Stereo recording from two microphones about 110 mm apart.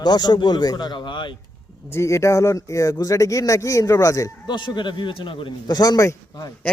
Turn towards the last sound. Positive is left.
turn(degrees=35)  # may be behind; listen again after turning